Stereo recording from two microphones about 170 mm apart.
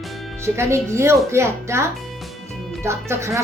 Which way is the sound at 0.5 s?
15° right (ahead or behind).